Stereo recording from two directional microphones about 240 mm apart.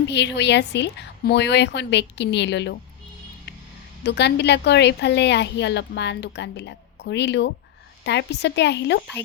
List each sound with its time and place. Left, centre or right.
0.1 s a woman's voice: left
4.0 s a woman's voice: left